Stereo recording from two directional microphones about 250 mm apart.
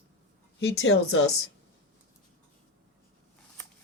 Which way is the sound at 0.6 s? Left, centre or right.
Left.